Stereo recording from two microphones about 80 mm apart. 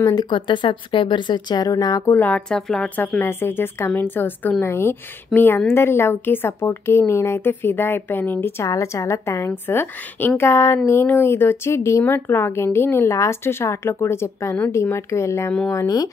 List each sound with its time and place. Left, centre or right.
0.1 s speech: left
2.1 s a woman's voice: centre
2.5 s a woman's voice: centre
3.2 s a woman's voice: left